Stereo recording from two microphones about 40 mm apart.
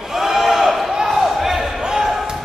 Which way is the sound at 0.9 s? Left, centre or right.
Centre.